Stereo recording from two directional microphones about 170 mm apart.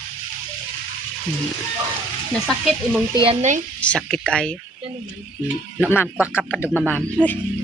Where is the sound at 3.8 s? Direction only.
5° left (ahead or behind).